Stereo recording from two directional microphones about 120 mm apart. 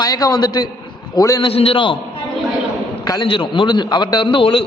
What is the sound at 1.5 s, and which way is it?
Speech, 50° left (ahead or behind).